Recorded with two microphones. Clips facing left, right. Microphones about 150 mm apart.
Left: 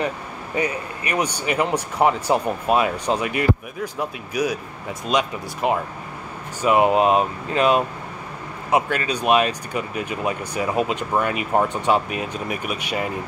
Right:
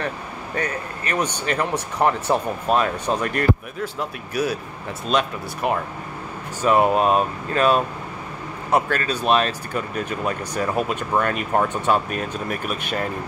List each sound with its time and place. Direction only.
0.6 s speech: 10° left (ahead or behind)